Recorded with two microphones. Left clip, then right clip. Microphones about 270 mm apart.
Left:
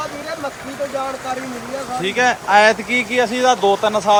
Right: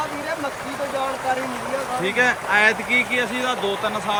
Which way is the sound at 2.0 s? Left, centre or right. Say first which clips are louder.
Left 4 dB; centre.